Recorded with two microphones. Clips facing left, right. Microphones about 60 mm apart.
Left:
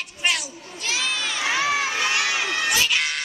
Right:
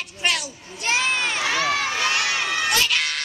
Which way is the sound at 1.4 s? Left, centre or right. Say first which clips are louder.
Left 3 dB; centre.